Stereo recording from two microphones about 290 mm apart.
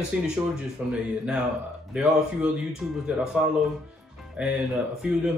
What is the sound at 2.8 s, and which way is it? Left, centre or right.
Speech, centre.